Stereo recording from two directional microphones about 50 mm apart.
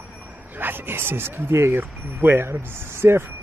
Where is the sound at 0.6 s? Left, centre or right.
Right.